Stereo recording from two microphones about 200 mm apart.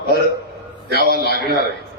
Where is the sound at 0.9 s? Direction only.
50° right (ahead or behind).